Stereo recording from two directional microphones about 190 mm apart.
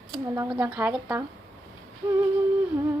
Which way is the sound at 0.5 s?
10° right (ahead or behind).